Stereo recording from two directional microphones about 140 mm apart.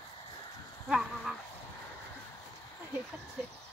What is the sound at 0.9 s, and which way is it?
Dog, 5° right (ahead or behind).